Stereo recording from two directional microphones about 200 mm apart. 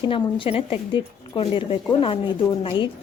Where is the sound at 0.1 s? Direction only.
25° left (ahead or behind).